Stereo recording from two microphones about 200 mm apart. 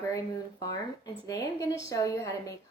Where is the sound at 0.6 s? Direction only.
15° left (ahead or behind).